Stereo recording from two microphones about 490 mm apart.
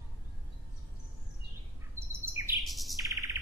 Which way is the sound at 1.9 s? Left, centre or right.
Centre.